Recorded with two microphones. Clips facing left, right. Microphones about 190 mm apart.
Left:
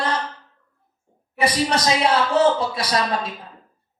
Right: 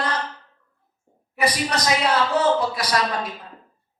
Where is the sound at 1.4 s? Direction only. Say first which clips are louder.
Left 3 dB; 30° left (ahead or behind).